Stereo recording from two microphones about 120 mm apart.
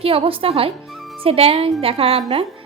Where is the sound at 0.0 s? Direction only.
50° right (ahead or behind).